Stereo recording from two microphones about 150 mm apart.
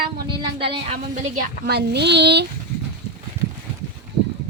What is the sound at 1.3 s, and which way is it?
A woman's voice, 90° right.